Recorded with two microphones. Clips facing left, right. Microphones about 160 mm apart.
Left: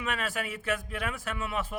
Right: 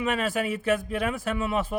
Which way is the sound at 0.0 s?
25° right (ahead or behind).